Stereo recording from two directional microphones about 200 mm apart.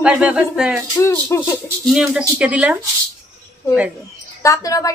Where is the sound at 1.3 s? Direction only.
10° left (ahead or behind).